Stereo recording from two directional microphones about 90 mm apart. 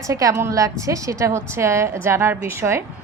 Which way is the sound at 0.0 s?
40° right (ahead or behind).